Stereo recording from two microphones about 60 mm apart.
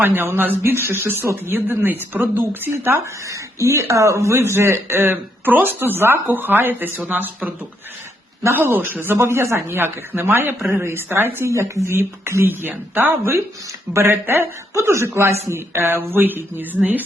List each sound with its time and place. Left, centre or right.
0.0 s speech: right
3.2 s speech: right
8.6 s speech: right
11.5 s speech: right
11.9 s speech: right
12.5 s speech: right
14.7 s speech: right
15.7 s speech: right